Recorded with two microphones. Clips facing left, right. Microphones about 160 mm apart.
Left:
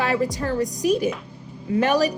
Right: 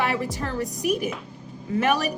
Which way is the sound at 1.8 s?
30° left (ahead or behind).